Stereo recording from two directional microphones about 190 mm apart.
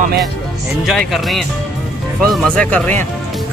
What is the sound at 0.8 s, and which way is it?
Speech, centre (ahead or behind).